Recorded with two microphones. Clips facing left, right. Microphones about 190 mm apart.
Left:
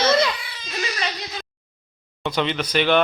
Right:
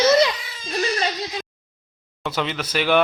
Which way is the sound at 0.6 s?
40° right (ahead or behind).